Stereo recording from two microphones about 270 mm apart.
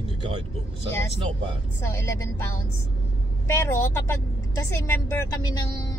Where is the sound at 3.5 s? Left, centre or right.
Centre.